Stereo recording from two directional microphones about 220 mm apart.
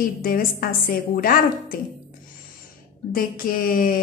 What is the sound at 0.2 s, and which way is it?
Speech, 40° left (ahead or behind).